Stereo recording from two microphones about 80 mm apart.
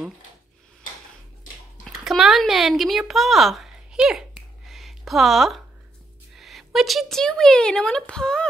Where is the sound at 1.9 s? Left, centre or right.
Centre.